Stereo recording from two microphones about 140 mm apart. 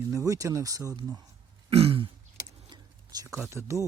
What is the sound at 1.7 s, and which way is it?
Throat clearing, 45° right (ahead or behind).